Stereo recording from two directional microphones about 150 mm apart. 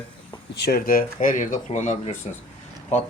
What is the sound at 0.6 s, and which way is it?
Speech, 85° left.